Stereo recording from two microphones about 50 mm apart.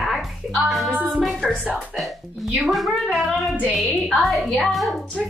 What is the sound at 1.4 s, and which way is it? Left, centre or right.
Music, centre.